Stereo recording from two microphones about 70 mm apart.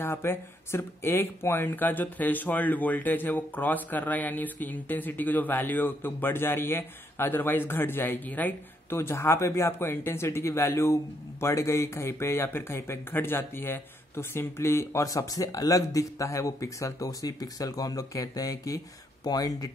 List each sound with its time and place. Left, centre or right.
0.0 s speech: left
8.9 s speech: left